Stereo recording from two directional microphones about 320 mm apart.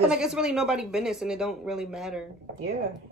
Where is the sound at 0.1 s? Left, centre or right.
Centre.